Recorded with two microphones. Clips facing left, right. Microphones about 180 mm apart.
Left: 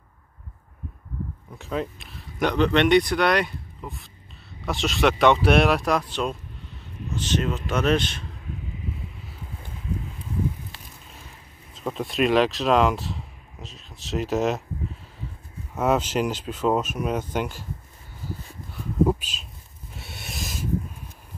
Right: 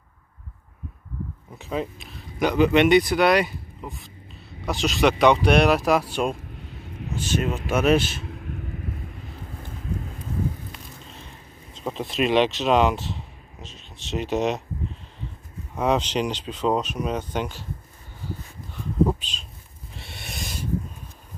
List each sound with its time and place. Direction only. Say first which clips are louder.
1.6 s speech: even; centre (ahead or behind)
8.4 s vehicle: right 2 dB; 60° right (ahead or behind)
11.7 s speech: even; centre (ahead or behind)
15.7 s speech: even; 5° left (ahead or behind)
19.0 s a sound: left 2 dB; 10° left (ahead or behind)